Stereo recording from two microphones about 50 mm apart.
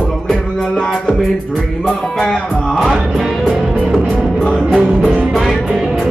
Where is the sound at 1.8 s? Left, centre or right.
Centre.